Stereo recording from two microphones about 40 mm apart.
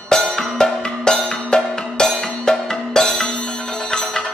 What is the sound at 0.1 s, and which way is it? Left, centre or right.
Music, centre.